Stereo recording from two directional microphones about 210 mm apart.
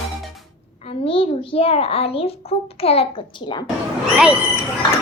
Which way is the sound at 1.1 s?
25° left (ahead or behind).